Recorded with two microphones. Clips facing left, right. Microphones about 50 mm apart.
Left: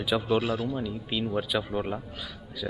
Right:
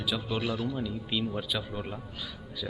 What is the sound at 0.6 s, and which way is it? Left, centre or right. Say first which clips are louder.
Speech: left 2 dB; centre.